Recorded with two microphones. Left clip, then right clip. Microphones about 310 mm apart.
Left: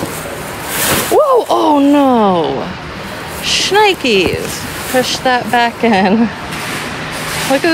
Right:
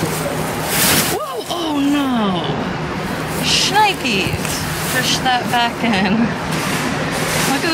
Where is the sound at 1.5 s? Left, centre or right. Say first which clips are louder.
Left 9 dB; centre.